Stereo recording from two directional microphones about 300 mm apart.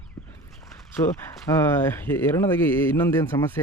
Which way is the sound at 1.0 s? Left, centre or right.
Centre.